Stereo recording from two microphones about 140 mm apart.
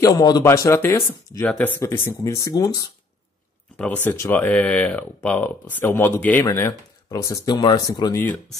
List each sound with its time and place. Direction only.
0.0 s speech: 30° left (ahead or behind)
3.7 s speech: 10° left (ahead or behind); by 8.2 s 25° left (ahead or behind)